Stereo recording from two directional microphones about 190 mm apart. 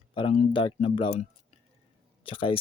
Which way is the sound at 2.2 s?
30° left (ahead or behind).